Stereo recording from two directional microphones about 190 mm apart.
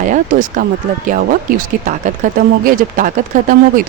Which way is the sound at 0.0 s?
40° right (ahead or behind).